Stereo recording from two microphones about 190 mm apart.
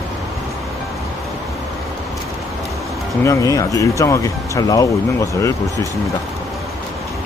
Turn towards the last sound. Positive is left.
turn(degrees=15)  # may be behind; listen again after turning